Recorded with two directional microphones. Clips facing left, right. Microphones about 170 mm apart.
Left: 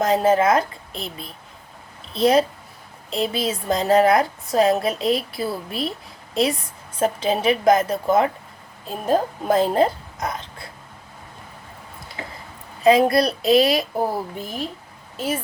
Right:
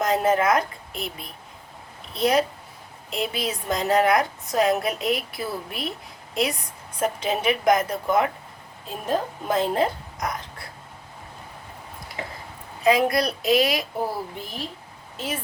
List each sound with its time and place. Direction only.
0.0 s a woman's voice: 30° left (ahead or behind)
7.0 s a woman's voice: 30° left (ahead or behind)
12.8 s a woman's voice: 30° left (ahead or behind)
14.1 s speech: 45° left (ahead or behind)